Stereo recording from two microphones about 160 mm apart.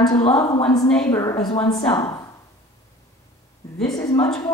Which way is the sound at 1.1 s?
15° left (ahead or behind).